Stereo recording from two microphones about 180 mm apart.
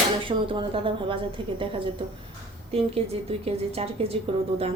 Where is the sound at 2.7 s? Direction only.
35° right (ahead or behind).